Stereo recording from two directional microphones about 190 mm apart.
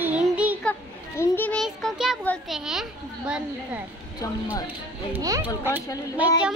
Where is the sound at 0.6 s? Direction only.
10° left (ahead or behind); by 3.8 s 5° right (ahead or behind).